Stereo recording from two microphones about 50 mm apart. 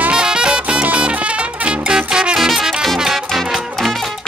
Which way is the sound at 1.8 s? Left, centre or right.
Centre.